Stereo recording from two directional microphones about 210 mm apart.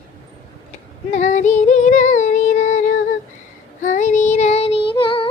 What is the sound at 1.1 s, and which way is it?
Female singing, 35° left (ahead or behind).